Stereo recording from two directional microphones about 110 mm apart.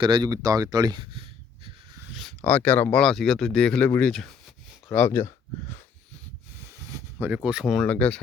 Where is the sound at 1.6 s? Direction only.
50° right (ahead or behind).